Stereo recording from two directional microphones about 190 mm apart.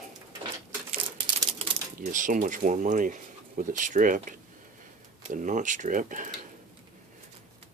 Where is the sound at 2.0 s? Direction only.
45° right (ahead or behind).